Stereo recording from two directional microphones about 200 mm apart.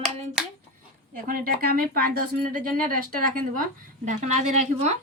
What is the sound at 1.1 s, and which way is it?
Speech, 45° right (ahead or behind).